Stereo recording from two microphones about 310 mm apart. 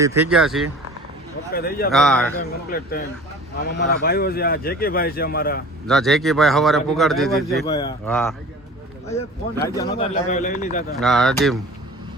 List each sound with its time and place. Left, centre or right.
0.0 s a man's voice: centre
1.5 s speech: left
1.9 s a man's voice: centre
2.6 s speech: left
5.9 s a man's voice: centre
7.7 s speech: centre
8.1 s a man's voice: centre
9.6 s speech: centre
10.0 s speech: left
10.9 s a man's voice: centre